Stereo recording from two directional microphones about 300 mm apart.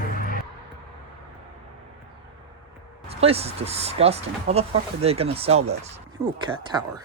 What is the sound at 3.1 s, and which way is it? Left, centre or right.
Speech, centre.